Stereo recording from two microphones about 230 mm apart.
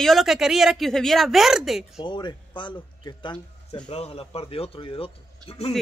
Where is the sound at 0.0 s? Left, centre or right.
Centre.